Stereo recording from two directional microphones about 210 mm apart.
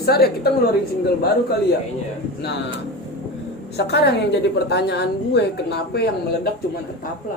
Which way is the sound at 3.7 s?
50° left (ahead or behind).